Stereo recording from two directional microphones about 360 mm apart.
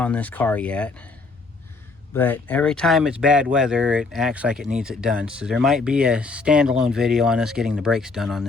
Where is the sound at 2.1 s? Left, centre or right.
Centre.